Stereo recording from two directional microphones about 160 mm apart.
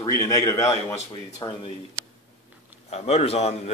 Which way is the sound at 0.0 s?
20° left (ahead or behind).